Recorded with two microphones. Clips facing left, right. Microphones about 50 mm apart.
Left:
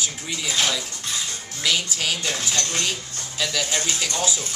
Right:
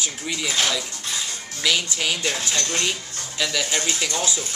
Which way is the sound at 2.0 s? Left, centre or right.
Centre.